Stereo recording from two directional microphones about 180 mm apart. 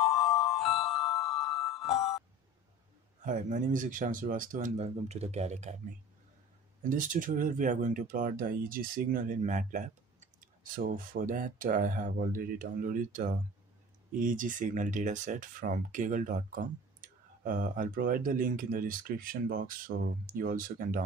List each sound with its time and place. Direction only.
0.0 s music: centre (ahead or behind)
3.3 s speech: 45° right (ahead or behind)
6.8 s speech: 45° right (ahead or behind)